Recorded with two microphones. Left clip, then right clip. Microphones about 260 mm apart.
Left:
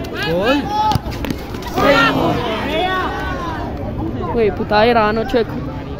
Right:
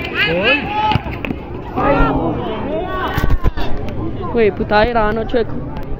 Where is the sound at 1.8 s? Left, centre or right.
Centre.